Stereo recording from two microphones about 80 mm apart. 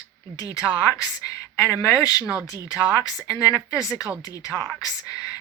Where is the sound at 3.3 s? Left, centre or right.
Left.